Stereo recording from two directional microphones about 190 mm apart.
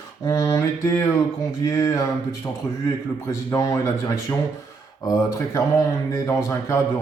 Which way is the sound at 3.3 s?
15° left (ahead or behind).